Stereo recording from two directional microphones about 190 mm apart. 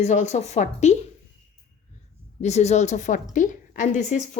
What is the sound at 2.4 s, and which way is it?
A woman's voice, 35° left (ahead or behind).